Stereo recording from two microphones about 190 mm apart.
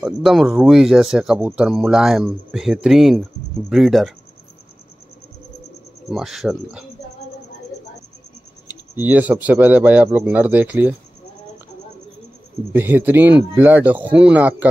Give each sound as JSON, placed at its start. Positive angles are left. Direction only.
{"t": 0.0, "sound": "speech", "side_deg": 0}
{"t": 6.0, "sound": "speech", "side_deg": 0}
{"t": 8.6, "sound": "speech", "side_deg": -10}
{"t": 12.7, "sound": "speech", "side_deg": -10}